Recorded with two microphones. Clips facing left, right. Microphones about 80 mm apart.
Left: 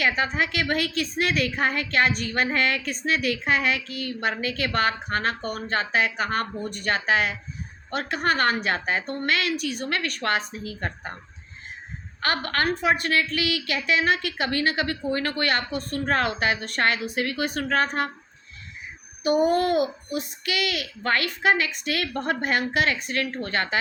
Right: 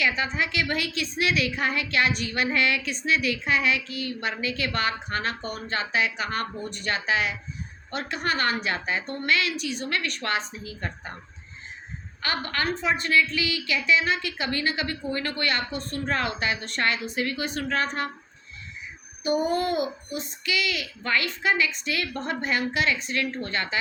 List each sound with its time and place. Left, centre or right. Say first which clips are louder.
0.0 s a woman's voice: left 2 dB; left
12.2 s a woman's voice: left 3 dB; left
19.2 s a woman's voice: left 4 dB; left